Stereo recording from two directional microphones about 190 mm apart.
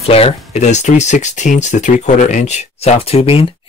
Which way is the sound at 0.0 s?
30° left (ahead or behind).